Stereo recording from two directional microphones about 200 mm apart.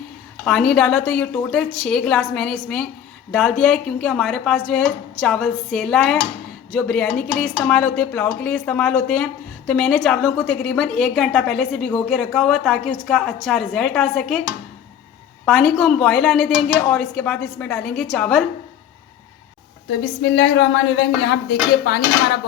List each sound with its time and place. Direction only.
0.4 s speech: 5° left (ahead or behind)
15.4 s speech: 5° left (ahead or behind)
19.9 s speech: 60° left (ahead or behind)